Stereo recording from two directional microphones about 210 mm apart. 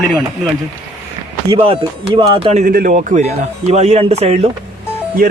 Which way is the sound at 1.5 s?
25° right (ahead or behind).